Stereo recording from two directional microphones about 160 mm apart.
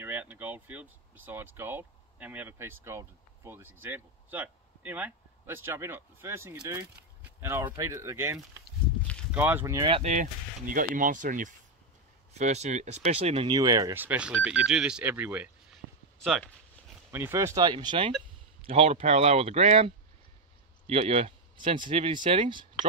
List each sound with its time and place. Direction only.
0.0 s speech: 10° right (ahead or behind)
9.8 s speech: 35° right (ahead or behind)
10.7 s speech: 55° right (ahead or behind); by 13.5 s 40° right (ahead or behind)
13.5 s speech: 25° right (ahead or behind)
17.1 s speech: 15° right (ahead or behind); by 22.7 s 30° right (ahead or behind)